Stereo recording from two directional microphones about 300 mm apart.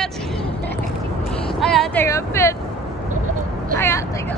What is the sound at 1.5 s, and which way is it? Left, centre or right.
Vehicle, centre.